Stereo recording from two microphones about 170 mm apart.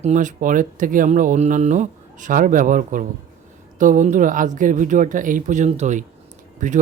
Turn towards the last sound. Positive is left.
turn(degrees=-50)  # may be behind; listen again after turning